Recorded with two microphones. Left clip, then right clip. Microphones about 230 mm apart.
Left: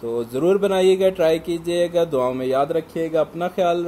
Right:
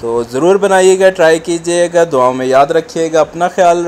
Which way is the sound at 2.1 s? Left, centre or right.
Centre.